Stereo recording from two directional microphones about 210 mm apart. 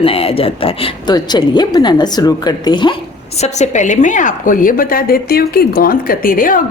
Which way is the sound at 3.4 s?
35° left (ahead or behind).